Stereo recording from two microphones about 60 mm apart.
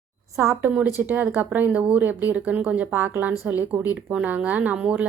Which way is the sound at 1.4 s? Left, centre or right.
Right.